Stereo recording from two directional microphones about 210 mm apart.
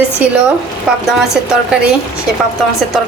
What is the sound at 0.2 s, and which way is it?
Speech, 5° right (ahead or behind).